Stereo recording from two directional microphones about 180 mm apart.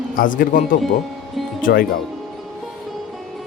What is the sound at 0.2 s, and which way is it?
Speech, 50° left (ahead or behind).